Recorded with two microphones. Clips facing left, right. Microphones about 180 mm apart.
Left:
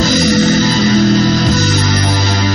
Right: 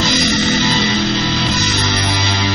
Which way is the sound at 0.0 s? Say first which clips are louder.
Left 5 dB; 45° left (ahead or behind).